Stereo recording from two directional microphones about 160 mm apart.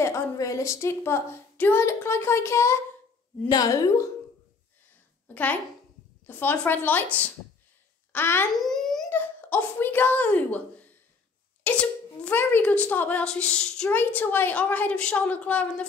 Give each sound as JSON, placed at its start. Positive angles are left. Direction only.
{"t": 0.0, "sound": "a woman's voice", "side_deg": 20}
{"t": 5.3, "sound": "a woman's voice", "side_deg": 10}
{"t": 8.5, "sound": "a sound", "side_deg": 0}
{"t": 9.1, "sound": "a woman's voice", "side_deg": 10}